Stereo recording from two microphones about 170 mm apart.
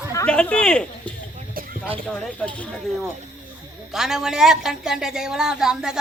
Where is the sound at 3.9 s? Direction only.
5° right (ahead or behind).